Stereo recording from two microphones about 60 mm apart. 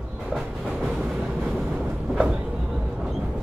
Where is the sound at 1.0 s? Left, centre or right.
Centre.